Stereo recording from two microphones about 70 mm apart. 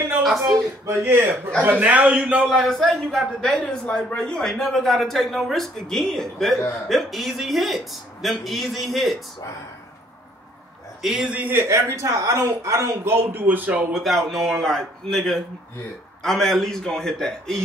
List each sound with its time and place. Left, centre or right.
0.8 s speech: right
1.6 s a man's voice: right
2.4 s a man's voice: centre
3.6 s a man's voice: centre
11.0 s a man's voice: centre
11.3 s a man's voice: right
11.6 s speech: right
13.9 s a man's voice: centre